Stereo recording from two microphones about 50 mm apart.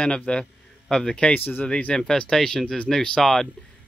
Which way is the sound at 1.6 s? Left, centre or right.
Centre.